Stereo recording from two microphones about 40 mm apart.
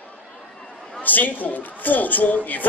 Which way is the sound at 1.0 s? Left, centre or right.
Left.